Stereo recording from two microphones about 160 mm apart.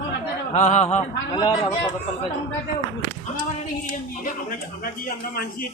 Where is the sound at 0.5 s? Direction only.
45° left (ahead or behind).